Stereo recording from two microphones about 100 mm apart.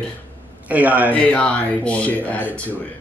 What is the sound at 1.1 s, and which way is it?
Speech, 15° left (ahead or behind).